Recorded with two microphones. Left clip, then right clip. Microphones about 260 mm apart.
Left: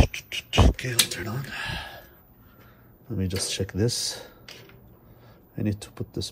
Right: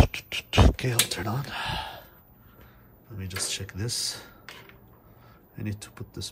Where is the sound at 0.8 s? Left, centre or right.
Centre.